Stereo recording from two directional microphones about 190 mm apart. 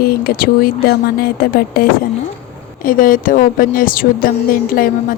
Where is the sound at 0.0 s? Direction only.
55° left (ahead or behind).